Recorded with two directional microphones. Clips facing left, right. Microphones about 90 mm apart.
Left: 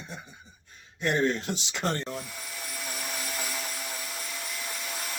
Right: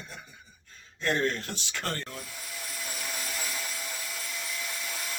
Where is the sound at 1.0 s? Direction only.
20° left (ahead or behind).